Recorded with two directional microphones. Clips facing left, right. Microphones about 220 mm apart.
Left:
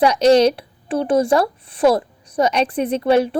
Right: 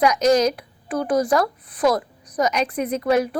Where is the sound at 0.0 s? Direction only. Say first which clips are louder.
Left 4 dB; 30° left (ahead or behind).